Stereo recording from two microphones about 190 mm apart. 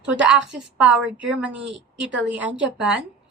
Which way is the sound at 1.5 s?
65° right (ahead or behind).